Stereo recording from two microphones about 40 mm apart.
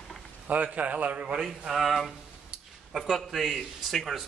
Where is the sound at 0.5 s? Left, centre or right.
Right.